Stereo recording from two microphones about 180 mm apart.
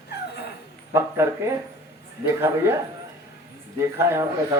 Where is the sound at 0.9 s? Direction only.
15° right (ahead or behind).